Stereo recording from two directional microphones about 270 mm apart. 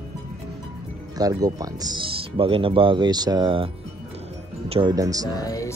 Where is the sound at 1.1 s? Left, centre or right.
Centre.